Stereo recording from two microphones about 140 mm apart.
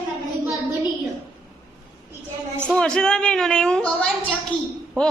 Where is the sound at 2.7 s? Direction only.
5° left (ahead or behind).